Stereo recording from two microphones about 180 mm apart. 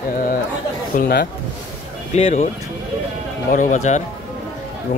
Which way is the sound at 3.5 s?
45° left (ahead or behind).